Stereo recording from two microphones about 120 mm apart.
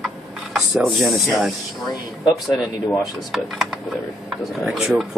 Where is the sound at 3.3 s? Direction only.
Centre (ahead or behind).